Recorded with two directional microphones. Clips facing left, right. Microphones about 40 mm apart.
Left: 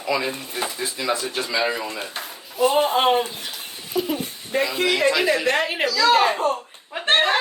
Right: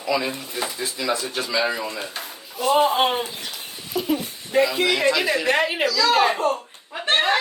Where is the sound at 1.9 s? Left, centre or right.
Left.